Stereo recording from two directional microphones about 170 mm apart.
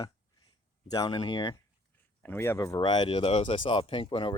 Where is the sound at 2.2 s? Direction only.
15° left (ahead or behind).